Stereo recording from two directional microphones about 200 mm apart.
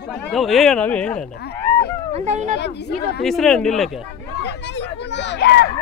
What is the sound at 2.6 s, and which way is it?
Speech, 55° left (ahead or behind).